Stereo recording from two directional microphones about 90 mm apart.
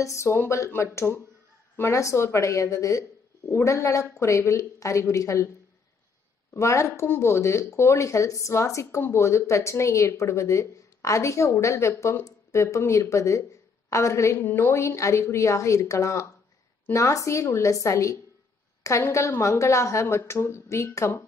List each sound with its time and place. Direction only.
0.0 s speech: 30° left (ahead or behind)
6.5 s speech: 35° left (ahead or behind)